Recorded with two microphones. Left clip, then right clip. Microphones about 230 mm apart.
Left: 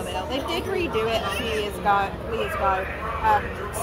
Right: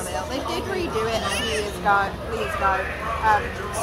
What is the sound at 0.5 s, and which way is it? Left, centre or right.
Speech, centre.